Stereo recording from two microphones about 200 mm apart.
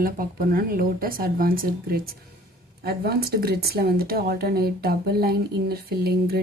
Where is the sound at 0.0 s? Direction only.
45° right (ahead or behind).